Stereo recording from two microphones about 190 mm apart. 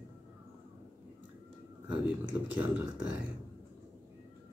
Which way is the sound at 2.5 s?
5° right (ahead or behind).